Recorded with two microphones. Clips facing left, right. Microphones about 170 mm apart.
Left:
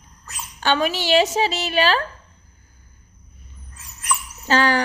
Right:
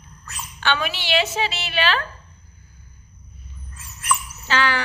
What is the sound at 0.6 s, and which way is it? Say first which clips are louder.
A woman's voice: left 4 dB; 40° left (ahead or behind).